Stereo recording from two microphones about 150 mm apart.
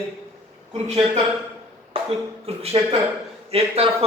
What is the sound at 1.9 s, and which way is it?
A man's voice, 40° right (ahead or behind).